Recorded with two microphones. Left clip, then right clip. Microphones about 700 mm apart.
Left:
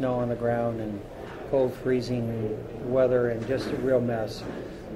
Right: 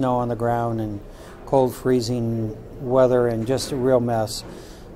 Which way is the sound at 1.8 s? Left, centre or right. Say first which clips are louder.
Right 5 dB; right.